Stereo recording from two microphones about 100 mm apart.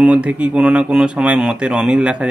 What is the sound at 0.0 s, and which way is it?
Speech, 15° right (ahead or behind).